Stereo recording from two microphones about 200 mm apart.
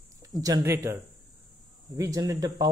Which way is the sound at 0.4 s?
15° right (ahead or behind).